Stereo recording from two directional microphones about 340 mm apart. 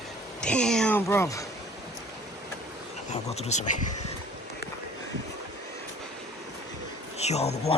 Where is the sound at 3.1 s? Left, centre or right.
Centre.